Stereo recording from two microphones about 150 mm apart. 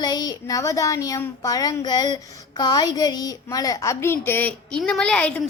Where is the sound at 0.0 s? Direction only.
25° left (ahead or behind).